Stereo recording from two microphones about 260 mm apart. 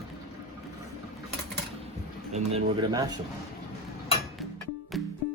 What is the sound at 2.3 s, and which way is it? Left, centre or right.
Speech, right.